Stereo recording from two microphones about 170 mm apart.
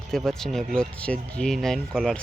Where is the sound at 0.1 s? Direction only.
5° left (ahead or behind).